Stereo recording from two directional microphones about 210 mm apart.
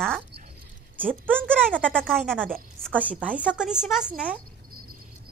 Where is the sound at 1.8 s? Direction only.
5° left (ahead or behind).